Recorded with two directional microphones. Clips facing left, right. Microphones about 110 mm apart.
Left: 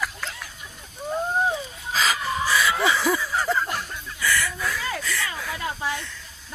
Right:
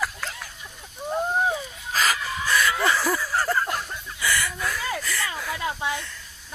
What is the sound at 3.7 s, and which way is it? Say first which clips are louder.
Chicken: right 1 dB; 15° right (ahead or behind).